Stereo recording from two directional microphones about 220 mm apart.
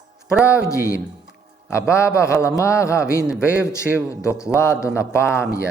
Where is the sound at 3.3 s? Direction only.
5° right (ahead or behind).